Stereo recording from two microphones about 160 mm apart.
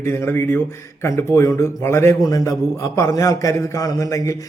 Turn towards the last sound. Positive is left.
turn(degrees=20)  # may be behind; listen again after turning